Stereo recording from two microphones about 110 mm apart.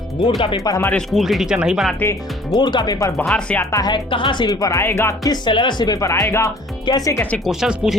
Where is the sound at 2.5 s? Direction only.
40° left (ahead or behind).